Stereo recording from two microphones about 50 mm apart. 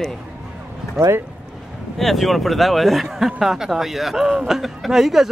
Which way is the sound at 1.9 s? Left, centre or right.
Centre.